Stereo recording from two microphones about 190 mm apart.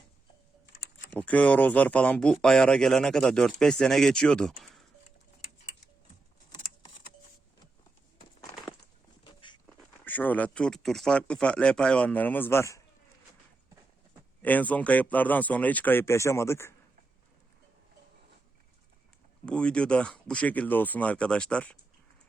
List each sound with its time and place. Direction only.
1.1 s speech: 10° left (ahead or behind)
8.4 s crushing: 20° left (ahead or behind)
9.2 s a sound: 25° left (ahead or behind)
10.0 s speech: 10° left (ahead or behind)
14.4 s speech: 10° left (ahead or behind)
19.5 s speech: 5° left (ahead or behind)